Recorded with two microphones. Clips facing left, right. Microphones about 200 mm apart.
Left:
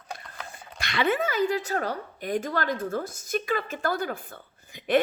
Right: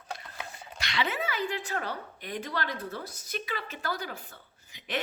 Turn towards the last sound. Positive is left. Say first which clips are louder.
# left 13 dB
turn(degrees=55)  # may be behind; listen again after turning